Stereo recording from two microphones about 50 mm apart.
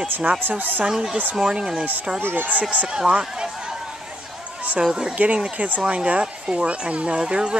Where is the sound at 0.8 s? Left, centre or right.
Centre.